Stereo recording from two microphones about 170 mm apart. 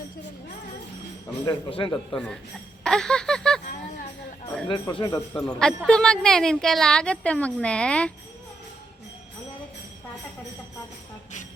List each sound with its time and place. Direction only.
1.5 s speech: 30° left (ahead or behind)
2.1 s a woman's voice: 5° left (ahead or behind)
2.8 s a sound: 5° left (ahead or behind)
4.7 s speech: 30° left (ahead or behind)
5.3 s a woman's voice: 5° left (ahead or behind)